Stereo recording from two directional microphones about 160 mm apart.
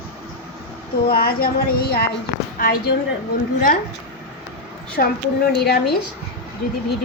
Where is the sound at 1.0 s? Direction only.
75° left (ahead or behind).